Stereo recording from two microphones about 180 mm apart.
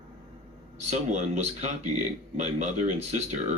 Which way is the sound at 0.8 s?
40° right (ahead or behind).